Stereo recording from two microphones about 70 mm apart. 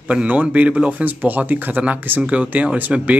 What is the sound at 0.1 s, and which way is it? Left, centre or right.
Speech, centre.